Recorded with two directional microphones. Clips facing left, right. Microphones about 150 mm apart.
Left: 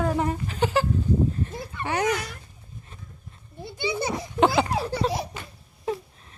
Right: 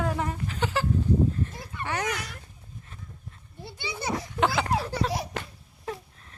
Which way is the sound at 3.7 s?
15° left (ahead or behind).